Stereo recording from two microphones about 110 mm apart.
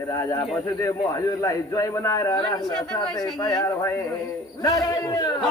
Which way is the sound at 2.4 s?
45° left (ahead or behind).